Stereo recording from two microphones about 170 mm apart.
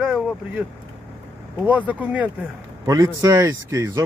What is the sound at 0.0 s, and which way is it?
Vehicle, centre (ahead or behind).